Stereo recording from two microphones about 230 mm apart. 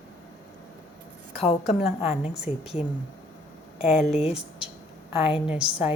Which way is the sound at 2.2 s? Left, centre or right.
Centre.